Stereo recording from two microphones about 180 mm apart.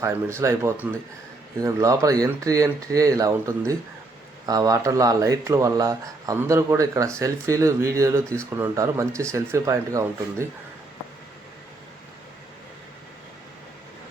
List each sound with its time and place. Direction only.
0.0 s speech: 15° right (ahead or behind)